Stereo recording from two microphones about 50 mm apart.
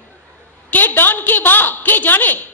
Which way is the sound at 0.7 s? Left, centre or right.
Left.